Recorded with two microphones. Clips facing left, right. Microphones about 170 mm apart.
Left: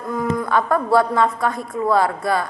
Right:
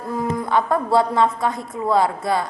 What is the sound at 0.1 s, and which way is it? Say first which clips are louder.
A woman's voice: left 1 dB; 25° right (ahead or behind).